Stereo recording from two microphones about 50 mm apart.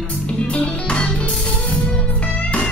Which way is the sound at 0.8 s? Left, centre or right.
Centre.